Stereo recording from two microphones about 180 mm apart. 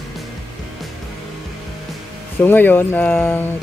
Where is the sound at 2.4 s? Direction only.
10° left (ahead or behind).